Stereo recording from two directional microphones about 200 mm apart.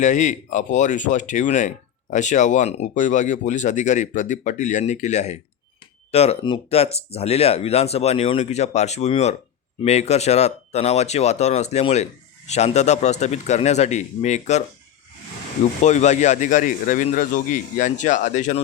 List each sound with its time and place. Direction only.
0.0 s speech: 40° left (ahead or behind)
15.8 s speech: 35° left (ahead or behind)